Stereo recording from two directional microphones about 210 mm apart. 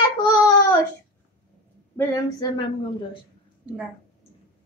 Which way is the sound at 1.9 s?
20° left (ahead or behind).